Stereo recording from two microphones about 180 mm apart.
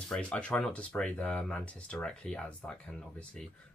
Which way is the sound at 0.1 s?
5° left (ahead or behind).